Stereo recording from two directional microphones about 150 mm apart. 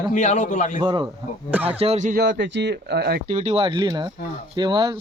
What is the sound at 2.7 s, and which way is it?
Speech, 90° right.